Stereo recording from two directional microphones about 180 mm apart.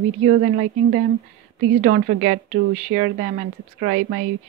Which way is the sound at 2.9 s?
60° right (ahead or behind).